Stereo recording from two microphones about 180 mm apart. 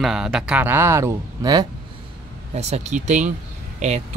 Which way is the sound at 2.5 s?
35° right (ahead or behind).